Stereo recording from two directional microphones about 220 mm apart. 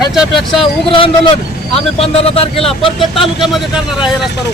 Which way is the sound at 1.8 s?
25° left (ahead or behind).